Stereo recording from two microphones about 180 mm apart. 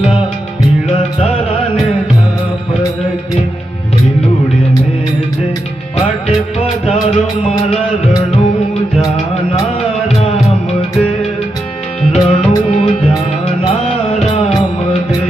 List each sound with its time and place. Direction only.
12.1 s music: 35° left (ahead or behind)